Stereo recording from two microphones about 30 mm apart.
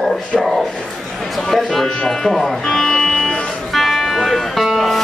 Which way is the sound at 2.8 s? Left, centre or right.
Centre.